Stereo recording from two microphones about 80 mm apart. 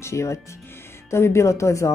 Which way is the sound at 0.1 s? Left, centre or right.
Left.